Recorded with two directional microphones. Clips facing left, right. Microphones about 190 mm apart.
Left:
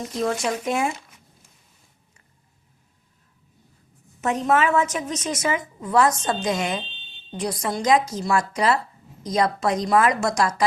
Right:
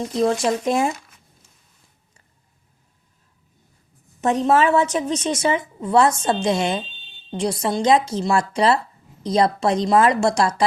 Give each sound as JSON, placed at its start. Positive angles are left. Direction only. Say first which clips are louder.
{"t": 0.2, "sound": "a woman's voice", "louder": "right 5 dB", "side_deg": -35}
{"t": 4.2, "sound": "a woman's voice", "louder": "right 3 dB", "side_deg": -35}